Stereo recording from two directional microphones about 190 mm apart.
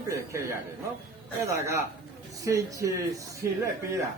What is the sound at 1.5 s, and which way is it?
A man's voice, 15° right (ahead or behind).